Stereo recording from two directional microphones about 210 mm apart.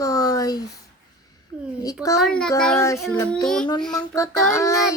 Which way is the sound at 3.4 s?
5° left (ahead or behind).